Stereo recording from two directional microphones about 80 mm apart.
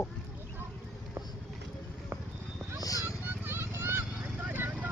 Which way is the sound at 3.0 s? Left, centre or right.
Right.